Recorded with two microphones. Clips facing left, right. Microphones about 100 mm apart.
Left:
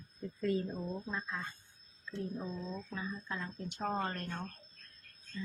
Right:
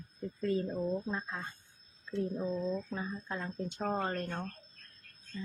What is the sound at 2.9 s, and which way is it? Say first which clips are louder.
Speech: right 2 dB; 40° right (ahead or behind).